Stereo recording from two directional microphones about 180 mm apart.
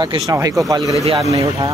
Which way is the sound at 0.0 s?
20° right (ahead or behind).